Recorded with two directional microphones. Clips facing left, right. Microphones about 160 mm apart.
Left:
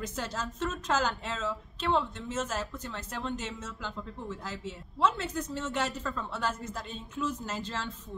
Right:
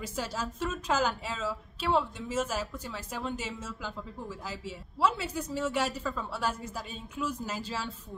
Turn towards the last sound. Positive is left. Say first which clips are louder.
# right 1 dB
turn(degrees=-10)  # may be behind; listen again after turning